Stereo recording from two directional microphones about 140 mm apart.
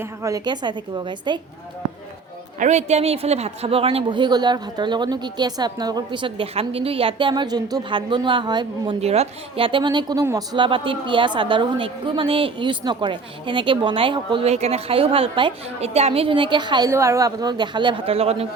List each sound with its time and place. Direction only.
0.0 s a man's voice: 25° right (ahead or behind)
2.6 s a man's voice: 55° right (ahead or behind); by 9.0 s 35° right (ahead or behind)
9.0 s a man's voice: 50° right (ahead or behind)
14.4 s a man's voice: 50° right (ahead or behind); by 16.9 s 30° right (ahead or behind)
16.9 s a man's voice: 20° right (ahead or behind); by 18.4 s 45° right (ahead or behind)